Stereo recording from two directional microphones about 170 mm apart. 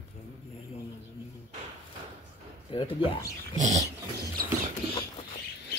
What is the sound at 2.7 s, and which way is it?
Speech, 30° left (ahead or behind).